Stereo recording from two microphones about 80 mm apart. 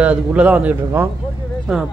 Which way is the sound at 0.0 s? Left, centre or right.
Centre.